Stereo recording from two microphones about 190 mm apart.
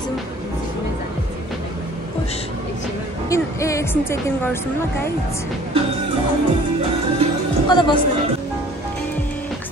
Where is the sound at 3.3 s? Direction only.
15° left (ahead or behind).